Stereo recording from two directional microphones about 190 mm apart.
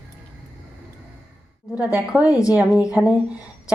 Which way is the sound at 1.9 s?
10° right (ahead or behind).